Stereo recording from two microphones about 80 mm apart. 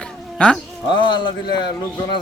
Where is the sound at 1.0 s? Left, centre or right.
Left.